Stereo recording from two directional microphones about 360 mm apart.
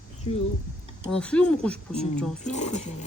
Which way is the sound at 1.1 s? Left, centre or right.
Centre.